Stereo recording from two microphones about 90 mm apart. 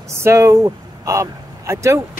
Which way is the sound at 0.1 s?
30° right (ahead or behind).